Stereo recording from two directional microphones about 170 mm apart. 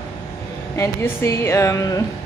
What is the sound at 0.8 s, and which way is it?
A woman's voice, 15° left (ahead or behind).